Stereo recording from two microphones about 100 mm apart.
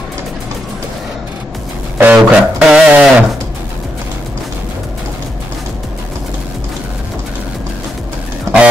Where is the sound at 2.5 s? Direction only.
10° right (ahead or behind).